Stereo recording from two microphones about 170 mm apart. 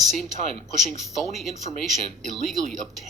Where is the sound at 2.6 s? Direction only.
50° right (ahead or behind).